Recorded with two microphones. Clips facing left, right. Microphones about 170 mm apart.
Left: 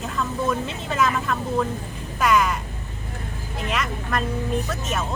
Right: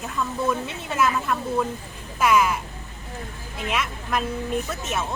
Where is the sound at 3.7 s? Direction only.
5° right (ahead or behind).